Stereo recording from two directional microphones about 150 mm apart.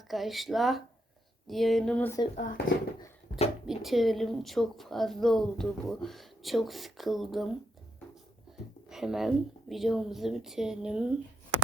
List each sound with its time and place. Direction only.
0.1 s a woman's voice: centre (ahead or behind)
2.3 s speech: 65° left (ahead or behind)
3.3 s a sound: 55° left (ahead or behind)
3.7 s a woman's voice: centre (ahead or behind)
8.5 s a sound: 5° right (ahead or behind)
8.9 s a woman's voice: 5° right (ahead or behind)